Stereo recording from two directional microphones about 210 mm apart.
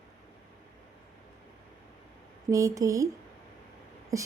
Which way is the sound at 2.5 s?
15° right (ahead or behind).